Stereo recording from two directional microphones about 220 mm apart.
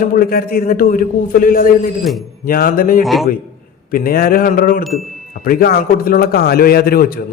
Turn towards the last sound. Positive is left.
turn(degrees=45)  # may be behind; listen again after turning